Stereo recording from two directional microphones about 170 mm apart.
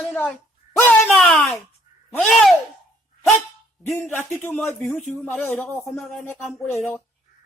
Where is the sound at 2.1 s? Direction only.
Centre (ahead or behind).